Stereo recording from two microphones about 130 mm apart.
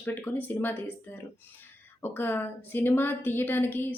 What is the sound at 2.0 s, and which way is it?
Speech, 15° left (ahead or behind).